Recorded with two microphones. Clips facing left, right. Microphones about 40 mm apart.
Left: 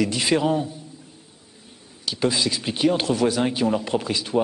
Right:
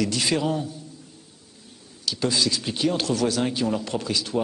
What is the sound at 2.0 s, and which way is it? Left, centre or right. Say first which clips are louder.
Speech: left 1 dB; left.